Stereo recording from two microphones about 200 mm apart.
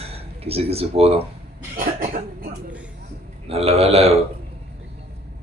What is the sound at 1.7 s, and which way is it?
Speech, 45° right (ahead or behind).